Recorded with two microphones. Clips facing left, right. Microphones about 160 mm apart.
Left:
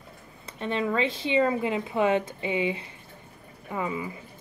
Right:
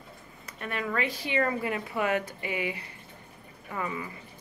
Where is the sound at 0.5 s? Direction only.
25° left (ahead or behind).